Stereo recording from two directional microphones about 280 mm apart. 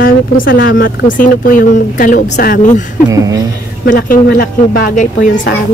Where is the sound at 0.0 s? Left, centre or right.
Left.